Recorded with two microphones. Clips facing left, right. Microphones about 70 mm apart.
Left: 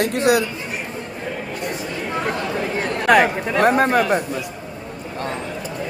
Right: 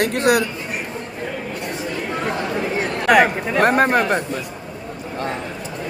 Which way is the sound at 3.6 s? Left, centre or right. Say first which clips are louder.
Even; right.